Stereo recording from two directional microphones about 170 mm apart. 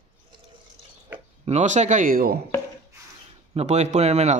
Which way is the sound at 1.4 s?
40° right (ahead or behind).